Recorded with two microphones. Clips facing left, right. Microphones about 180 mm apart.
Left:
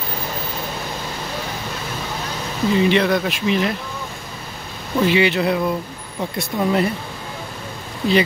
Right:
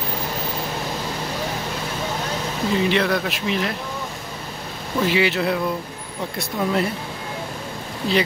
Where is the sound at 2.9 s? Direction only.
Centre (ahead or behind).